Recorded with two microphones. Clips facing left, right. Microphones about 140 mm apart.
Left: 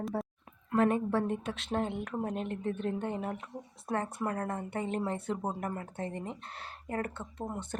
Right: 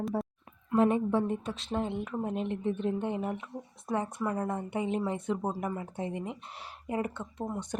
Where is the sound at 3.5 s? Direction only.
5° left (ahead or behind).